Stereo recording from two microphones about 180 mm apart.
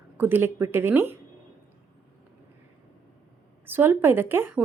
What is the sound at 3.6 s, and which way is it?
Speech, 10° right (ahead or behind).